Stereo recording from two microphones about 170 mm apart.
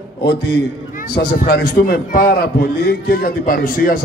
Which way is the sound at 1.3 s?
55° left (ahead or behind).